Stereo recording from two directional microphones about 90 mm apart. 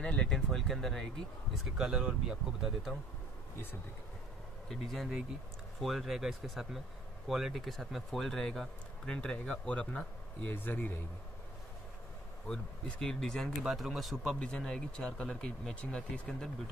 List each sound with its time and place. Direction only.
0.0 s speech: 10° left (ahead or behind)
4.6 s speech: centre (ahead or behind); by 11.0 s 20° left (ahead or behind)
12.4 s speech: 10° left (ahead or behind)
13.6 s speech: 5° right (ahead or behind)